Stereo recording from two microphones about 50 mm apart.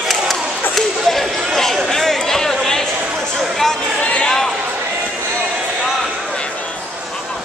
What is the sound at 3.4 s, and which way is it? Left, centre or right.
Chatter, centre.